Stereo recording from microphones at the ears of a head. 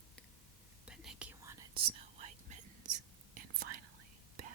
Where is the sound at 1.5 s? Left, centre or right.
Right.